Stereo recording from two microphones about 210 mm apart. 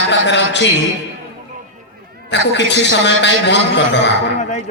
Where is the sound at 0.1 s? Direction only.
55° left (ahead or behind).